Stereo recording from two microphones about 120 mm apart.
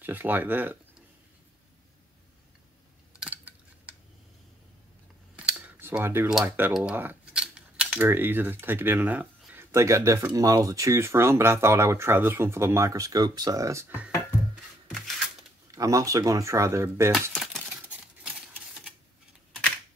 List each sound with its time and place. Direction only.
0.0 s speech: 15° right (ahead or behind)
3.2 s a sound: 10° right (ahead or behind)
5.3 s scissors: 5° right (ahead or behind)
5.8 s speech: 20° right (ahead or behind)
15.7 s speech: 30° right (ahead or behind)
17.3 s typewriter: centre (ahead or behind)